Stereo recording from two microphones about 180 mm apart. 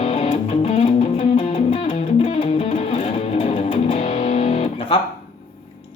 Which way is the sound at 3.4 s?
35° left (ahead or behind).